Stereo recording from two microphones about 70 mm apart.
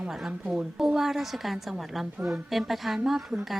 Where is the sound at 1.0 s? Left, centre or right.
Centre.